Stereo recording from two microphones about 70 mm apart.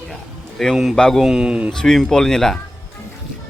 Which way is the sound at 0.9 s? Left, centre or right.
Centre.